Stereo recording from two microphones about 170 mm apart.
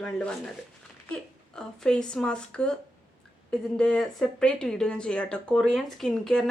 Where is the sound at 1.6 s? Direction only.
5° left (ahead or behind).